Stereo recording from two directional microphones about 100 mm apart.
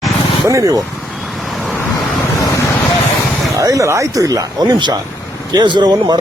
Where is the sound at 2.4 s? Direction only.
35° left (ahead or behind).